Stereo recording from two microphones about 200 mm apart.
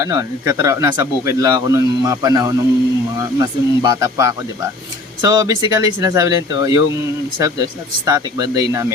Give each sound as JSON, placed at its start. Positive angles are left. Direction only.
{"t": 0.0, "sound": "speech", "side_deg": -15}